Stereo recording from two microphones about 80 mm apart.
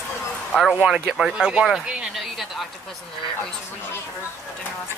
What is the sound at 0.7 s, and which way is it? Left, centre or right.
Speech, centre.